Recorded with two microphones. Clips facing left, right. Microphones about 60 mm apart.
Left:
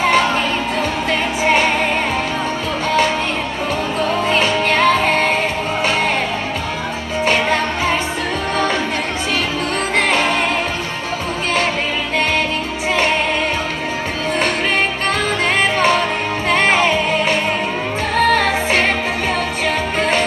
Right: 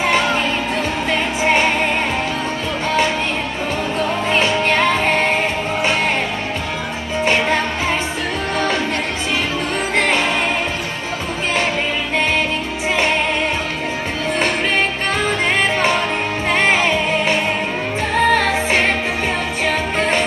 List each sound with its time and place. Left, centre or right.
4.1 s music: centre
7.2 s music: centre
16.4 s music: centre
18.1 s music: centre
19.6 s music: centre